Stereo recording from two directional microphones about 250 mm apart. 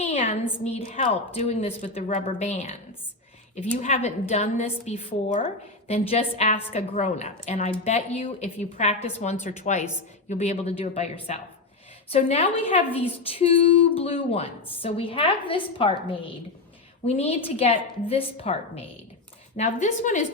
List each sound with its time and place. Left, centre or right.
0.0 s a woman's voice: left